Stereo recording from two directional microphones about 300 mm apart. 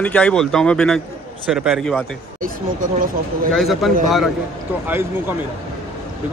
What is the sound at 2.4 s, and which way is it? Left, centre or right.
Speech, right.